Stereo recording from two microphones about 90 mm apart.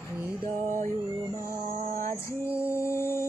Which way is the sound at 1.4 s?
30° left (ahead or behind).